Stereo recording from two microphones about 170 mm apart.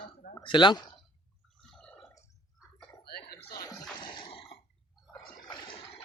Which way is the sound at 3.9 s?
25° left (ahead or behind).